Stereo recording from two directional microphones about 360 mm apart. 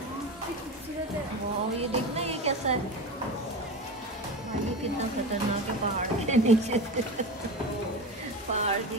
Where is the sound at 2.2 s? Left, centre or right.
Centre.